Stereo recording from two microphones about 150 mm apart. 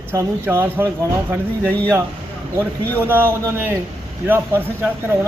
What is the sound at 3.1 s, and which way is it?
Speech, 15° right (ahead or behind).